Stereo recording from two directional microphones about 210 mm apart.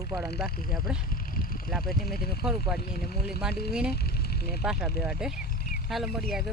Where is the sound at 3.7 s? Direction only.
5° right (ahead or behind).